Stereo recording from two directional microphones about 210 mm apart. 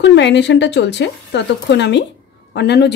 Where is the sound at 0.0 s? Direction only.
55° left (ahead or behind).